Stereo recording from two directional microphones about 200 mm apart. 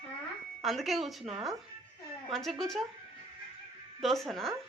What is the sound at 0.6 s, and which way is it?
Speech, centre (ahead or behind).